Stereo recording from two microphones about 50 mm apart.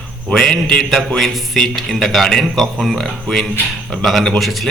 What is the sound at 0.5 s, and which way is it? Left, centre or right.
Speech, centre.